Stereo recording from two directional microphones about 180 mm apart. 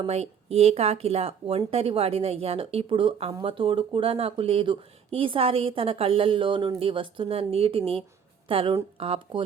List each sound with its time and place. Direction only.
0.0 s speech: 35° right (ahead or behind)